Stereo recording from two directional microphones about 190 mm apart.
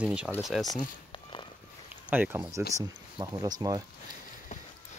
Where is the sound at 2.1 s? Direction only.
10° right (ahead or behind).